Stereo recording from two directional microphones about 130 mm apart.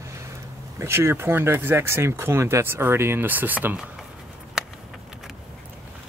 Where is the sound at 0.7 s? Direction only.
20° right (ahead or behind).